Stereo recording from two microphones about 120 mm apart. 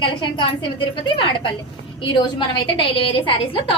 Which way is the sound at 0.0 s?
40° left (ahead or behind).